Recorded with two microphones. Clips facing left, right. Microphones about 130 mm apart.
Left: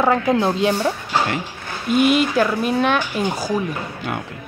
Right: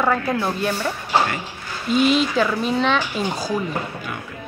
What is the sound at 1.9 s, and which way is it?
Speech, 55° left (ahead or behind).